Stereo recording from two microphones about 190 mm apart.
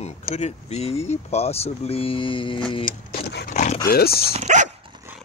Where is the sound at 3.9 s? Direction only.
55° left (ahead or behind).